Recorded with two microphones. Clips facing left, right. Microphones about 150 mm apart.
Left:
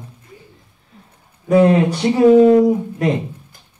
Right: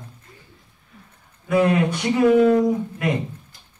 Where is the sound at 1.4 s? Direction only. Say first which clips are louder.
Left 6 dB; 30° left (ahead or behind).